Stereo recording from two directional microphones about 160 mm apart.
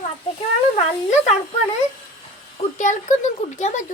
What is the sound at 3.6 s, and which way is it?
Speech, 50° left (ahead or behind).